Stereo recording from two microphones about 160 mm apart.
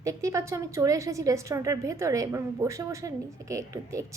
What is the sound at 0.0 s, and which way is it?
A woman's voice, 20° right (ahead or behind).